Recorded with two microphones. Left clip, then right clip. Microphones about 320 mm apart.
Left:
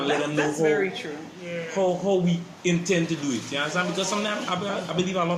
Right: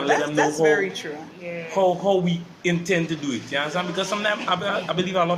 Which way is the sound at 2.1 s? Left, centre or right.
Right.